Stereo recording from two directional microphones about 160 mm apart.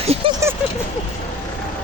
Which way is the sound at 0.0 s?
40° right (ahead or behind).